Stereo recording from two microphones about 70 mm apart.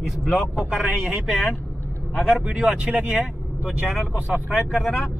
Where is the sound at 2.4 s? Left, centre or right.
Centre.